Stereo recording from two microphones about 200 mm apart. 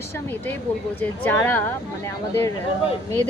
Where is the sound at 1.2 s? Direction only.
10° left (ahead or behind).